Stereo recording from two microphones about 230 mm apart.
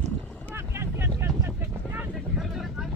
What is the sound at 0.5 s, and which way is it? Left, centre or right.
Boat, centre.